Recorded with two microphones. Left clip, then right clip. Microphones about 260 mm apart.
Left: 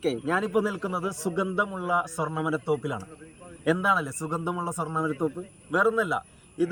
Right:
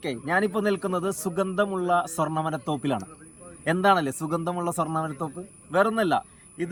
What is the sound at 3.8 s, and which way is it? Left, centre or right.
A man's voice, right.